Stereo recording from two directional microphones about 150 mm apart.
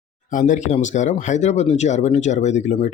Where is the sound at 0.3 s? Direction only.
55° left (ahead or behind).